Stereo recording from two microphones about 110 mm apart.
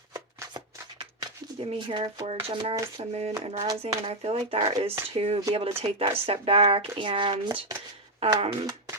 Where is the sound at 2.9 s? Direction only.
65° right (ahead or behind).